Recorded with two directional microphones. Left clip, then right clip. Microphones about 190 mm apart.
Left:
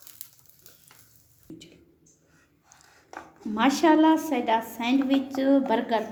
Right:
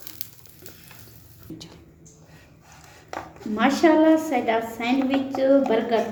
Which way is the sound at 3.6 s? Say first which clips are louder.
Right 2 dB; 50° left (ahead or behind).